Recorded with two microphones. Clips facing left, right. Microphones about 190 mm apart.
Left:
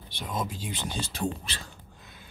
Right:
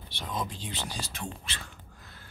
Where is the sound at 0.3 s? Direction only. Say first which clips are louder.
Left 2 dB; 10° left (ahead or behind).